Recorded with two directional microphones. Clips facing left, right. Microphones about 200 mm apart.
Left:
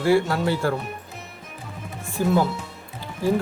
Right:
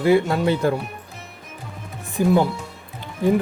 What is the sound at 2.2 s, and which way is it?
Music, 15° right (ahead or behind).